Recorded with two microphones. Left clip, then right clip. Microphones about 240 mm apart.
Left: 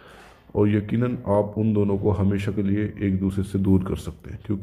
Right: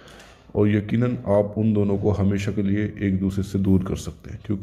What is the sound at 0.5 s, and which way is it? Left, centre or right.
Speech, centre.